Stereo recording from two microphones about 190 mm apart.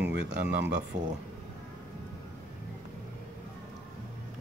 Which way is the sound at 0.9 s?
40° right (ahead or behind).